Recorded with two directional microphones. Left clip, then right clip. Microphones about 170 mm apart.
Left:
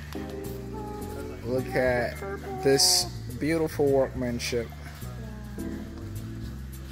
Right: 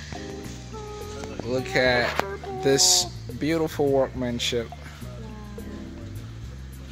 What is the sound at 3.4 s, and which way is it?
Speech, 10° right (ahead or behind).